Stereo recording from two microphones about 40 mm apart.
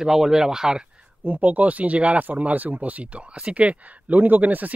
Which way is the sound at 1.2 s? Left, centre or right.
Right.